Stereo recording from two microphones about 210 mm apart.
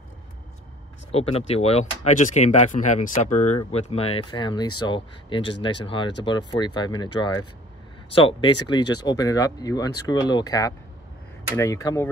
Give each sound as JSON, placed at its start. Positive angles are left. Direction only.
{"t": 1.1, "sound": "speech", "side_deg": 30}